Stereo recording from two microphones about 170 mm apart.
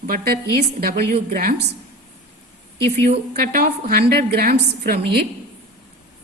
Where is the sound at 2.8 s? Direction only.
40° right (ahead or behind).